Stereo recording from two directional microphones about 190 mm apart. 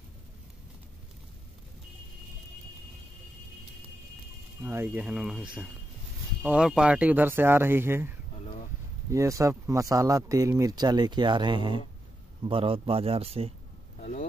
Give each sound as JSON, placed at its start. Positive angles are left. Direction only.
{"t": 4.6, "sound": "speech", "side_deg": -10}
{"t": 13.9, "sound": "vehicle", "side_deg": 40}